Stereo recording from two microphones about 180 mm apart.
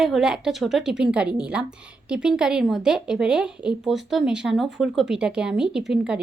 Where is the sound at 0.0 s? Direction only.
Centre (ahead or behind).